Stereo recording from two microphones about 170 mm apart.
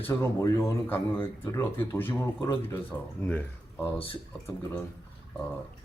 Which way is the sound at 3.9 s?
30° left (ahead or behind).